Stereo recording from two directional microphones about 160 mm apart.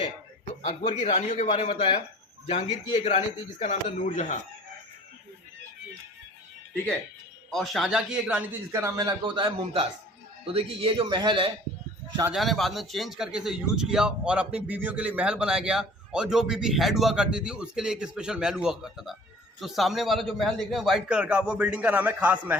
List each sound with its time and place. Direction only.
0.6 s speech: 45° left (ahead or behind)
7.5 s a man's voice: centre (ahead or behind)
8.7 s a man's voice: 20° right (ahead or behind)
12.3 s a man's voice: centre (ahead or behind)